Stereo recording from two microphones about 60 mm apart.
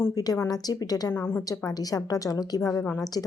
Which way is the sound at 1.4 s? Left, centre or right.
Left.